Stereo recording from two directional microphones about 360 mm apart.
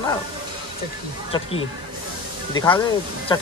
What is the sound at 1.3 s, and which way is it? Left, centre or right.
Speech, centre.